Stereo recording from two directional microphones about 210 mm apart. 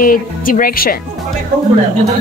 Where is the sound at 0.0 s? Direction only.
40° left (ahead or behind).